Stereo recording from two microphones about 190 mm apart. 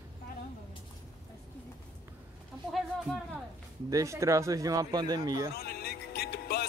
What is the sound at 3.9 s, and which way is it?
Speech, 15° right (ahead or behind).